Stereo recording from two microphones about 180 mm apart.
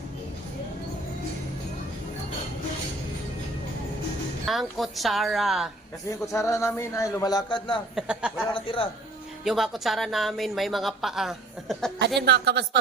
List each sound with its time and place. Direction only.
4.4 s speech: centre (ahead or behind)
6.1 s speech: 15° left (ahead or behind)
7.9 s speech: 5° right (ahead or behind)
8.5 s speech: 30° left (ahead or behind)
9.4 s speech: centre (ahead or behind)
12.2 s a woman's voice: 65° right (ahead or behind)